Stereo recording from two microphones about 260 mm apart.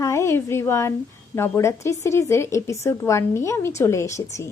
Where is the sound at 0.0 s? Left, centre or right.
Centre.